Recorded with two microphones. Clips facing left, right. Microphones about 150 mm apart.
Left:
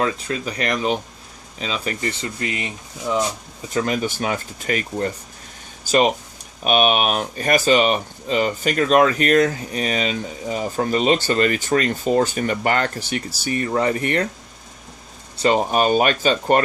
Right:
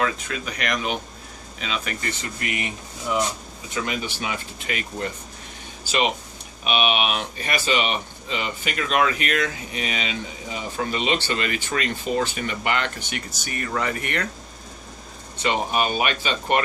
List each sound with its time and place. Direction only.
0.0 s speech: 35° left (ahead or behind)
3.8 s speech: 45° left (ahead or behind)
15.4 s speech: 40° left (ahead or behind)